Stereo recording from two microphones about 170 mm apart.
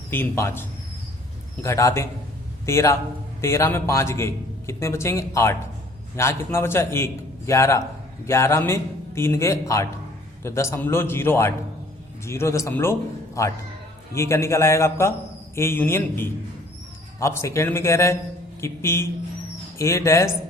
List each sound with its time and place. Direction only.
0.1 s a man's voice: 15° left (ahead or behind)